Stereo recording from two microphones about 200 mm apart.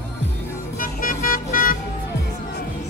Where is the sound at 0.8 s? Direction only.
45° left (ahead or behind).